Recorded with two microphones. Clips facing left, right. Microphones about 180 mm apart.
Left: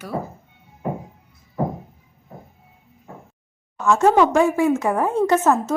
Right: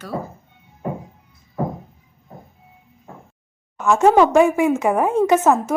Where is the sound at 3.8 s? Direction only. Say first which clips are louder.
Right 2 dB; 20° right (ahead or behind).